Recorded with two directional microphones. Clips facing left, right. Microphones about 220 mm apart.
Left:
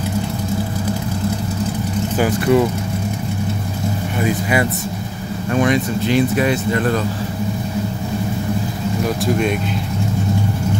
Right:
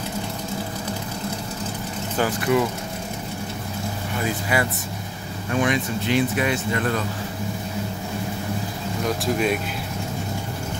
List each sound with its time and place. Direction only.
2.5 s speech: 35° left (ahead or behind)
4.2 s speech: 20° left (ahead or behind)
5.6 s speech: 40° left (ahead or behind)
9.2 s speech: centre (ahead or behind)